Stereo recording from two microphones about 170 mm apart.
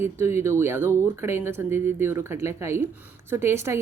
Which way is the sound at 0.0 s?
15° right (ahead or behind).